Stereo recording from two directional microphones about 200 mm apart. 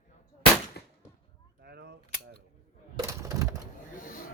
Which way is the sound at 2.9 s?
15° right (ahead or behind).